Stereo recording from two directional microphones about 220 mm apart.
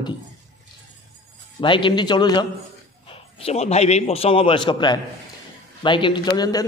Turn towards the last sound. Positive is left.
turn(degrees=20)  # may be behind; listen again after turning